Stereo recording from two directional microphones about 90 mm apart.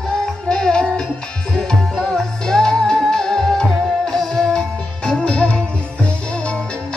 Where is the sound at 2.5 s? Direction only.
10° left (ahead or behind).